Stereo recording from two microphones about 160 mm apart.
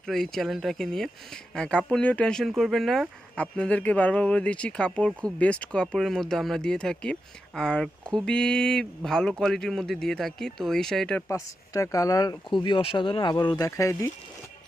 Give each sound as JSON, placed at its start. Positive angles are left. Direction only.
{"t": 0.0, "sound": "speech", "side_deg": 0}
{"t": 11.3, "sound": "speech", "side_deg": 20}